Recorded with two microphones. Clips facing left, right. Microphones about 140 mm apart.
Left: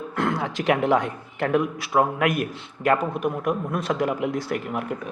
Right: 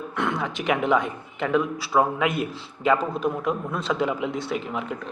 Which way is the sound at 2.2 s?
25° right (ahead or behind).